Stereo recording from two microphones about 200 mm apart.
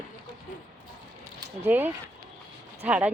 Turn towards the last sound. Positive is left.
turn(degrees=-5)  # may be behind; listen again after turning